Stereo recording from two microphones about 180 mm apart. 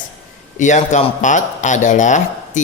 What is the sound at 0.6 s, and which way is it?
Speech, 40° left (ahead or behind).